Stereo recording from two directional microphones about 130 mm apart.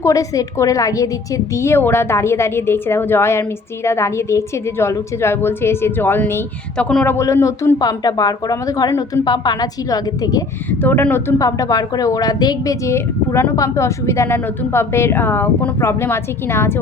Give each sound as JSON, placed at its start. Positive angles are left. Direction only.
{"t": 0.0, "sound": "a woman's voice", "side_deg": 25}
{"t": 10.7, "sound": "a woman's voice", "side_deg": 15}